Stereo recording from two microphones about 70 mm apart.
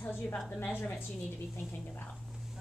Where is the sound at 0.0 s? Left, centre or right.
Left.